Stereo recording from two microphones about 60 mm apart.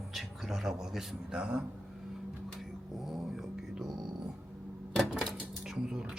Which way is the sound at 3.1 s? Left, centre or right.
Centre.